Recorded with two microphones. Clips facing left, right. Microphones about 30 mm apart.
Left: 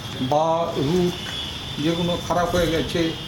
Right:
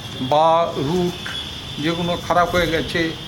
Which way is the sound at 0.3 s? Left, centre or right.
Right.